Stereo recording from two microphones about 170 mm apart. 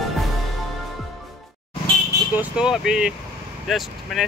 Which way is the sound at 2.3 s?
5° right (ahead or behind).